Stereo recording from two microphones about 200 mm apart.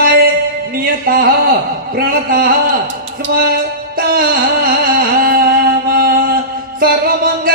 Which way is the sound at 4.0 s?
50° right (ahead or behind).